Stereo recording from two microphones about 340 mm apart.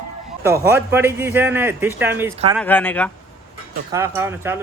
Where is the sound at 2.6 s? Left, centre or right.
Centre.